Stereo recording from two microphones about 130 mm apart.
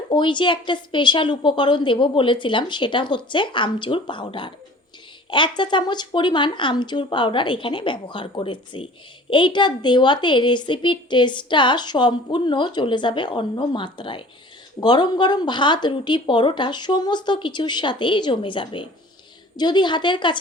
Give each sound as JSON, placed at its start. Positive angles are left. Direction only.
{"t": 0.1, "sound": "a woman's voice", "side_deg": 35}